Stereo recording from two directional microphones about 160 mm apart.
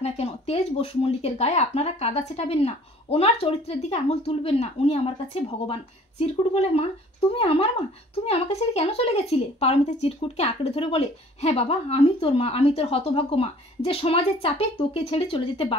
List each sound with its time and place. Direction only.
0.0 s speech: 40° left (ahead or behind)